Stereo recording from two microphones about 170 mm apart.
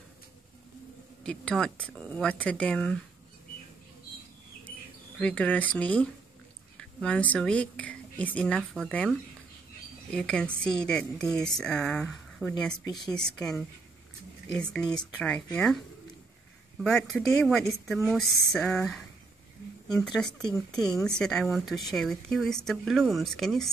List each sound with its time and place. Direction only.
1.2 s speech: 5° left (ahead or behind)
5.2 s speech: 5° left (ahead or behind)
10.1 s speech: 5° left (ahead or behind)
12.8 s speech: 25° left (ahead or behind)
13.1 s speech: 5° left (ahead or behind)
16.8 s speech: 5° left (ahead or behind)
20.2 s speech: 5° left (ahead or behind)